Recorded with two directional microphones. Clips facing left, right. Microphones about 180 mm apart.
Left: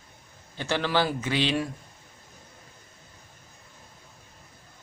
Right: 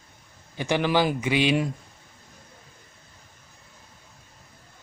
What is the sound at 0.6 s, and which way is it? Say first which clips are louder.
Speech: right 3 dB; 15° right (ahead or behind).